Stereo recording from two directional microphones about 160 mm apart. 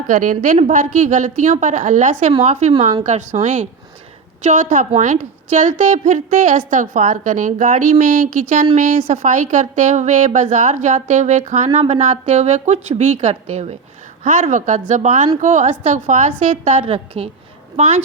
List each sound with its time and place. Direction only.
0.1 s a woman's voice: 55° right (ahead or behind)
16.8 s a woman's voice: 40° right (ahead or behind)